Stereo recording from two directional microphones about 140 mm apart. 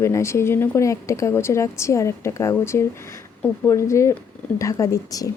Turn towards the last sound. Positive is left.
turn(degrees=25)  # may be behind; listen again after turning